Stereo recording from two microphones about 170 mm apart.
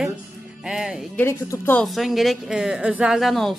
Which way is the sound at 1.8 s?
Centre (ahead or behind).